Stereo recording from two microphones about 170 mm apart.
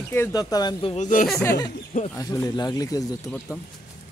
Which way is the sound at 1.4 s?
20° left (ahead or behind).